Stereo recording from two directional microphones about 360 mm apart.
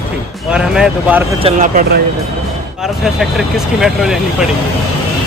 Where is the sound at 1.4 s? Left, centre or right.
Centre.